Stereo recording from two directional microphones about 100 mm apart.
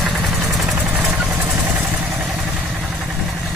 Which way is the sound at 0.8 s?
15° right (ahead or behind).